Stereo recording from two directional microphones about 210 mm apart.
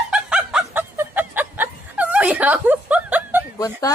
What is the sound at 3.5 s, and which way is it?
Speech, 15° left (ahead or behind).